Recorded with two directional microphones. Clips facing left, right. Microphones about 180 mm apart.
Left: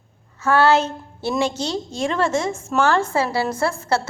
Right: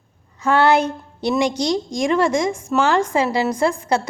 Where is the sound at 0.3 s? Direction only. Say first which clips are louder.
Right 1 dB; 15° right (ahead or behind).